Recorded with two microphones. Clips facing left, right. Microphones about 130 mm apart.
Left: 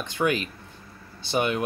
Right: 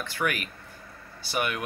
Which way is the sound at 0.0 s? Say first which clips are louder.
Left 5 dB; 20° left (ahead or behind).